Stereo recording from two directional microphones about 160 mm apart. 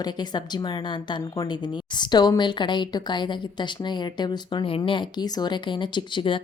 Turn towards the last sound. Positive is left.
turn(degrees=30)  # may be behind; listen again after turning